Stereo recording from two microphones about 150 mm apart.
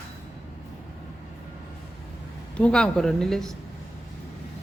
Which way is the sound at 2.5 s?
5° left (ahead or behind).